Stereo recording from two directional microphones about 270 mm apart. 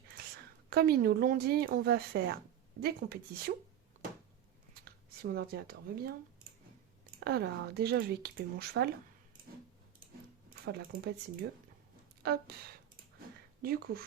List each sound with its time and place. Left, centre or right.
0.7 s speech: right
4.7 s speech: right
7.3 s speech: right
10.5 s speech: right
12.2 s speech: right
13.6 s speech: right